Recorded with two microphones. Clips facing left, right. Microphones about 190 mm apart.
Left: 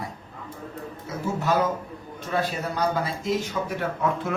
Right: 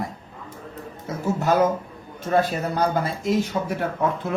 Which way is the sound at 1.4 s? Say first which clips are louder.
Right 4 dB; 50° right (ahead or behind).